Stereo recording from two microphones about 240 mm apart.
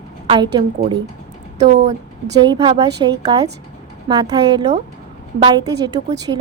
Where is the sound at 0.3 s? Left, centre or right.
Right.